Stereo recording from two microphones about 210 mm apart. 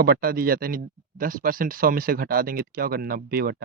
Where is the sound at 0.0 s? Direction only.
45° right (ahead or behind).